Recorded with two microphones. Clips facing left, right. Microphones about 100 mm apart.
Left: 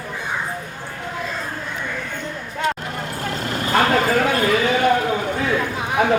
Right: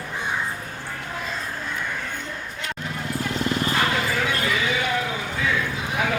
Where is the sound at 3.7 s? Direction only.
45° left (ahead or behind).